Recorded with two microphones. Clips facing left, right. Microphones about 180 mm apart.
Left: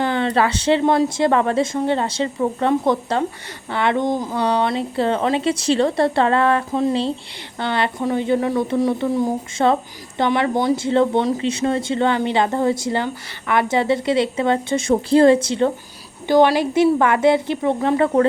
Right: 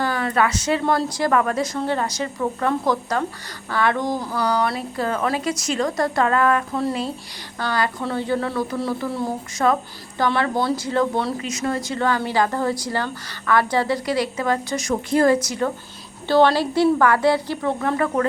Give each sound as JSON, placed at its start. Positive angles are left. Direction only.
{"t": 0.0, "sound": "a woman's voice", "side_deg": 25}
{"t": 16.2, "sound": "a woman's voice", "side_deg": 15}